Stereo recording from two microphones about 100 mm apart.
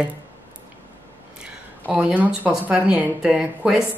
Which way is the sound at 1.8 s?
15° right (ahead or behind).